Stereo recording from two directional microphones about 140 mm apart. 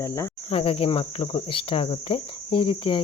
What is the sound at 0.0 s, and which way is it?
Cricket, 20° left (ahead or behind).